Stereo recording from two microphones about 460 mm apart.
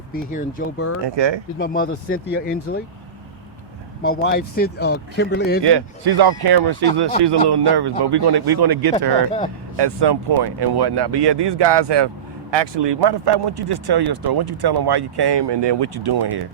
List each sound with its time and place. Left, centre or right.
0.1 s speech: centre
1.0 s speech: right
1.5 s speech: centre
4.0 s speech: left
5.6 s speech: right